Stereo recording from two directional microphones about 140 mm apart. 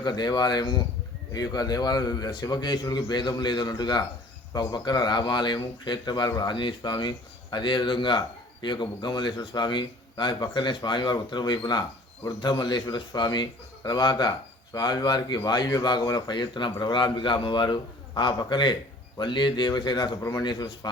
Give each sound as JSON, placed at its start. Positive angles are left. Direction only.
{"t": 0.0, "sound": "a man's voice", "side_deg": 30}